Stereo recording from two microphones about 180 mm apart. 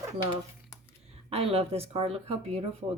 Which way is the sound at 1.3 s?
35° right (ahead or behind).